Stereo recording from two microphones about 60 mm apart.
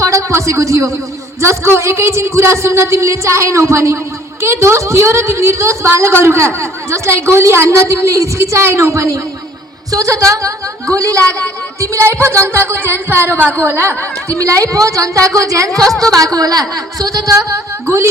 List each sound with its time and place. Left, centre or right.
0.0 s a sound: right
1.4 s a woman's voice: right
14.3 s speech: right
16.1 s speech: right